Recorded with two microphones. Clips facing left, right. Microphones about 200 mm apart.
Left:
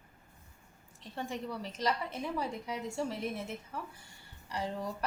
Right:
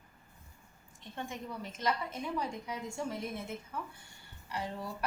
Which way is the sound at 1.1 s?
35° left (ahead or behind).